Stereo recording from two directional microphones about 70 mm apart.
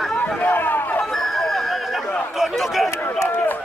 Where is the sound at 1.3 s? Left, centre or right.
Centre.